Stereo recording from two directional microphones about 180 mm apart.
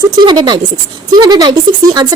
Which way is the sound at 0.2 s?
25° right (ahead or behind).